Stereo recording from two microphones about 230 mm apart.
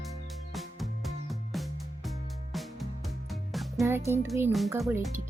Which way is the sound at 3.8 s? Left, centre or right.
Centre.